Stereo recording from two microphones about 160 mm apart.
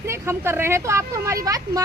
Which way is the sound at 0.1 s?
15° right (ahead or behind).